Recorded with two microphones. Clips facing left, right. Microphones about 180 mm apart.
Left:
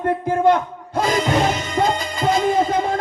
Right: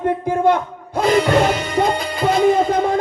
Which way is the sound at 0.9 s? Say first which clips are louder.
Right 4 dB; 60° right (ahead or behind).